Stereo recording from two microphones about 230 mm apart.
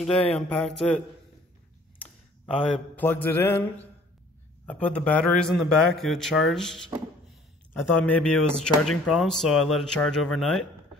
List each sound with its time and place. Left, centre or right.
0.3 s a man's voice: centre
3.0 s mantra: centre
4.6 s a man's voice: centre